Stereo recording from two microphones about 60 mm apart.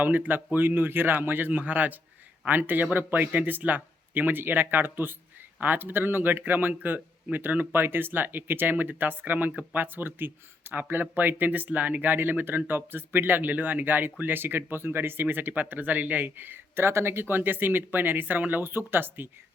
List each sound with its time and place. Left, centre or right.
0.0 s speech: right